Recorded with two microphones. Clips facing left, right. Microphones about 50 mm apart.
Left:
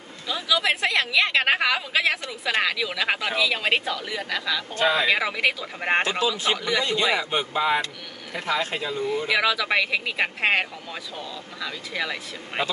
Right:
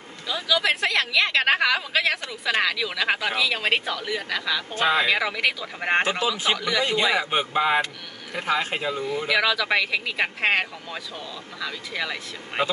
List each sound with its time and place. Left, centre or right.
0.3 s a woman's voice: centre
6.0 s speech: right
6.5 s a woman's voice: centre
6.8 s a man's voice: right
9.3 s speech: centre